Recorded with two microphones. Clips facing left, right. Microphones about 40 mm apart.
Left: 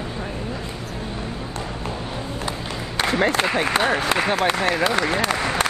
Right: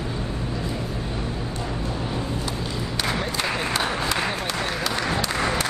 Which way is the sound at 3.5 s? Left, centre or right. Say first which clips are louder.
Left 5 dB; left.